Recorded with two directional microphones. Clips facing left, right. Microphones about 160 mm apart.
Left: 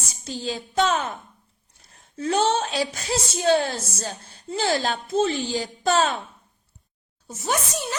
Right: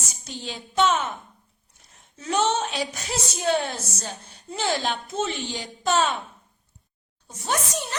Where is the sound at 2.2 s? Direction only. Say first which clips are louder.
Left 2 dB; 35° left (ahead or behind).